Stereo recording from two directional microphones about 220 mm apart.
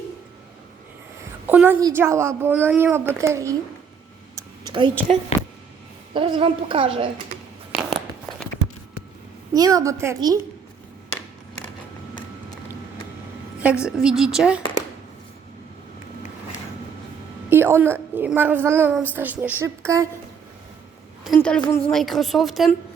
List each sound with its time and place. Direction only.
1.5 s a woman's voice: 10° right (ahead or behind)
4.4 s a sound: 20° right (ahead or behind)
6.1 s a woman's voice: 25° right (ahead or behind)
7.7 s a sound: centre (ahead or behind)
9.5 s a woman's voice: 15° right (ahead or behind)
13.6 s a woman's voice: 5° right (ahead or behind)
17.5 s a woman's voice: 10° right (ahead or behind)
21.3 s a woman's voice: 5° left (ahead or behind)